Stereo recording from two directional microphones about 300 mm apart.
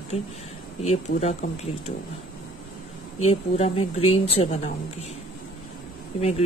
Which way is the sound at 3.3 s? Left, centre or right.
Centre.